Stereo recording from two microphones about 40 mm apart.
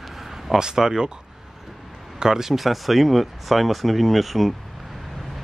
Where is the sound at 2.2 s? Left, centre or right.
Centre.